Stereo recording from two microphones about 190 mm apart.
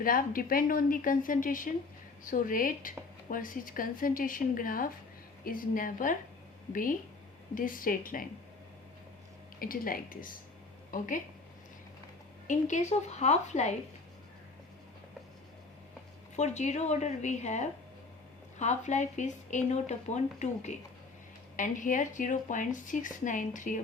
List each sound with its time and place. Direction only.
0.0 s speech: 50° left (ahead or behind)
7.5 s speech: 45° left (ahead or behind)
9.6 s speech: 50° left (ahead or behind)
12.5 s speech: 40° left (ahead or behind)
16.3 s speech: 35° left (ahead or behind)